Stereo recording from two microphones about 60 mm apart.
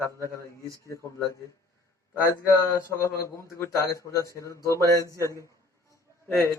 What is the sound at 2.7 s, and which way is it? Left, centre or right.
A man's voice, left.